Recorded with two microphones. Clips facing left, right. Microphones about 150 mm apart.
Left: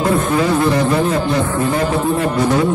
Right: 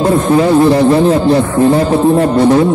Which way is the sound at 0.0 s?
30° right (ahead or behind).